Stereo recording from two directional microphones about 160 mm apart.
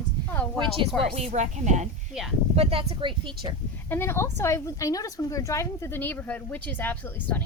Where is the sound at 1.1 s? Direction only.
45° right (ahead or behind).